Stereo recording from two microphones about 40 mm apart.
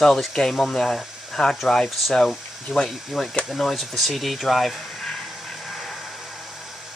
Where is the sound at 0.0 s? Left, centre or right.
Centre.